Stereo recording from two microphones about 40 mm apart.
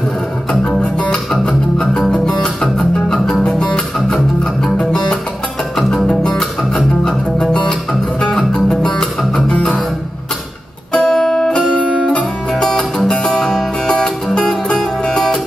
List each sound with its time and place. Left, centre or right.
1.3 s music: centre
5.8 s music: centre
9.3 s music: left
11.0 s music: centre
11.6 s music: centre
12.5 s music: centre
13.8 s music: centre